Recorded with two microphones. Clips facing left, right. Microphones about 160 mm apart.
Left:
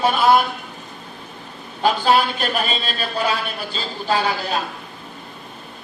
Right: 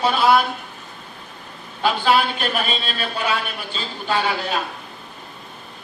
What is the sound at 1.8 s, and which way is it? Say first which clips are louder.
A man's voice: left 1 dB; 40° left (ahead or behind).